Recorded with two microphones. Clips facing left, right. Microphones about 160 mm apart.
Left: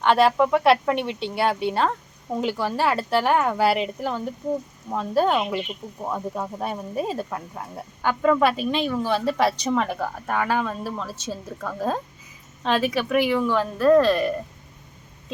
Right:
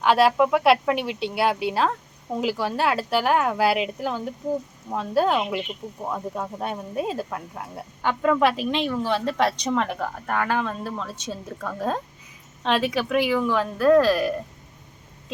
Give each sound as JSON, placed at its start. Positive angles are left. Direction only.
{"t": 0.0, "sound": "speech", "side_deg": -5}